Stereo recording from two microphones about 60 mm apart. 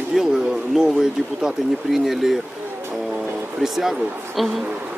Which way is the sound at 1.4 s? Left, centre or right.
Centre.